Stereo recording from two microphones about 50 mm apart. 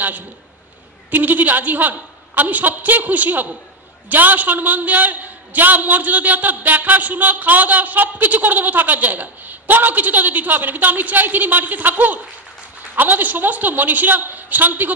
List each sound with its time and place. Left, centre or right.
1.1 s a man's voice: right